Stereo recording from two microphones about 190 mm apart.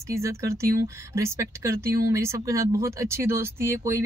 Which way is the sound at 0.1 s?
15° right (ahead or behind).